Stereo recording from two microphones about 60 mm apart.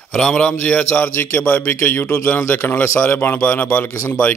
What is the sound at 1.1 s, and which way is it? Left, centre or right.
Speech, left.